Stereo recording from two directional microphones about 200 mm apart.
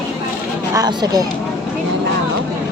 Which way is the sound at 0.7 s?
20° right (ahead or behind).